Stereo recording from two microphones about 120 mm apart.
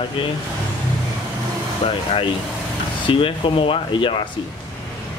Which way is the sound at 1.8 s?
50° left (ahead or behind).